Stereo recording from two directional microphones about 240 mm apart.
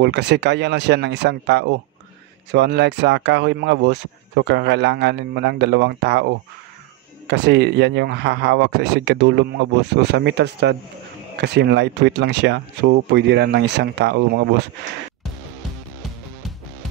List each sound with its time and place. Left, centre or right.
0.0 s speech: right